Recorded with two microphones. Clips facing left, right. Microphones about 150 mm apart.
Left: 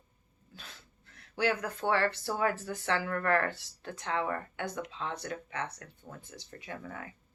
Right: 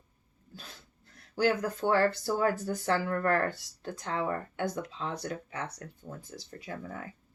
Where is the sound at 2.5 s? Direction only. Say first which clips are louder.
Right 3 dB; 40° right (ahead or behind).